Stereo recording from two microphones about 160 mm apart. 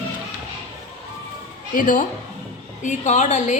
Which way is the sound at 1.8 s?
55° left (ahead or behind).